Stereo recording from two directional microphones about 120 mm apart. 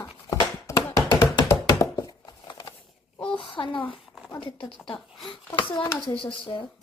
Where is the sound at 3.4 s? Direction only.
45° left (ahead or behind).